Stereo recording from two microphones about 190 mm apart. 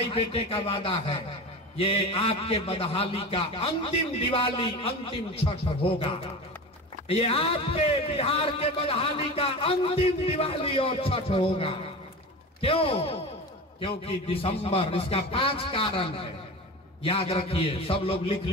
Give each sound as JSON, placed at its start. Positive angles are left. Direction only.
{"t": 0.1, "sound": "a man's voice", "side_deg": 30}